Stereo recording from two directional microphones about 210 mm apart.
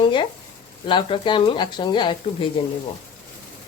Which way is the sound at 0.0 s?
25° left (ahead or behind).